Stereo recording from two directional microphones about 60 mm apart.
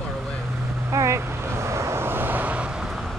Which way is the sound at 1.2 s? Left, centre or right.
Right.